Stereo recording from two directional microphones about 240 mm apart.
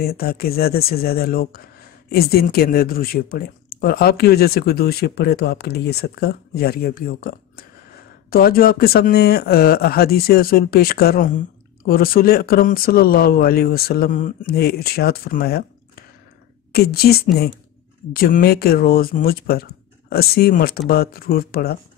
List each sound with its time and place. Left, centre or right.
0.0 s speech: left
16.7 s speech: left